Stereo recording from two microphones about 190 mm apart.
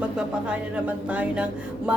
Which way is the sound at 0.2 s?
5° right (ahead or behind).